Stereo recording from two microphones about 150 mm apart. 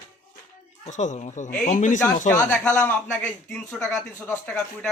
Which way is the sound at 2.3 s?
20° left (ahead or behind).